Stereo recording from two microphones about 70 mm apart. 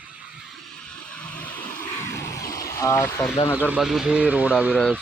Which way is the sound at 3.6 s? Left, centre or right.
Right.